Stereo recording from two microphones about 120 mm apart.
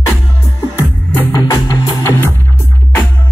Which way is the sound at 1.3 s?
30° left (ahead or behind).